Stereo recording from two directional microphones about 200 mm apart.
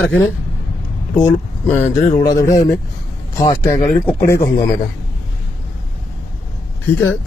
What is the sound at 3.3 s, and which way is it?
Speech, 15° left (ahead or behind).